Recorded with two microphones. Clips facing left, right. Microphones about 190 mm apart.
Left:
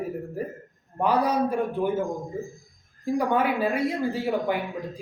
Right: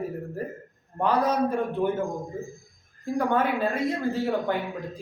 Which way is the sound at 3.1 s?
10° left (ahead or behind).